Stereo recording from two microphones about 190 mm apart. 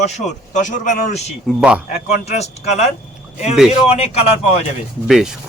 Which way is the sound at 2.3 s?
35° left (ahead or behind).